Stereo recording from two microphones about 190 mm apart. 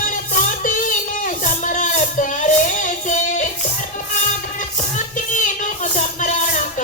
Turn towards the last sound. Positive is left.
turn(degrees=40)  # may be behind; listen again after turning